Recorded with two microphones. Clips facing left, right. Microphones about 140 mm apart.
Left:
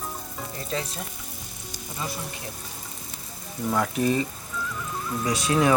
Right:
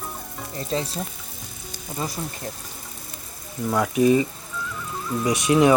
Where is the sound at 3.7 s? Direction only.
5° right (ahead or behind).